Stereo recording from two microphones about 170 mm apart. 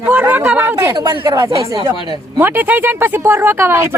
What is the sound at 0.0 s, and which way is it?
Speech, 10° right (ahead or behind).